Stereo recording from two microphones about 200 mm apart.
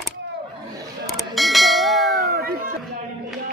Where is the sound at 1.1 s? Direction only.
Centre (ahead or behind).